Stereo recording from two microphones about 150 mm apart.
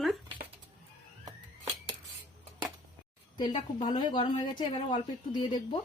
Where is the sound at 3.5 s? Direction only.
40° left (ahead or behind).